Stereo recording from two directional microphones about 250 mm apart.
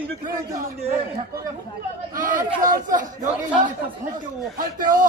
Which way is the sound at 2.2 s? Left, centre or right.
Right.